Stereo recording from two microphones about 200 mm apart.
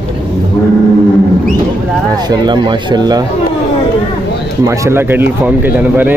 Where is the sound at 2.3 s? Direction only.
20° right (ahead or behind).